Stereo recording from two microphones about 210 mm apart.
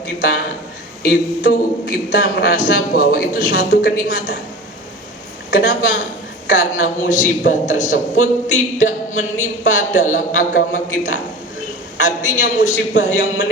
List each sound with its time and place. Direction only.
1.0 s a man's voice: 40° left (ahead or behind)
5.5 s speech: 40° left (ahead or behind)
12.7 s a man's voice: 60° left (ahead or behind)